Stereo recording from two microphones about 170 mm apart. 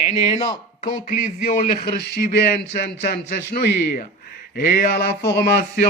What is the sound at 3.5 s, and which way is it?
Speech, 65° left (ahead or behind).